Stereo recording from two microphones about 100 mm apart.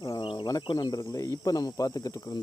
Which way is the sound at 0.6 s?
45° left (ahead or behind).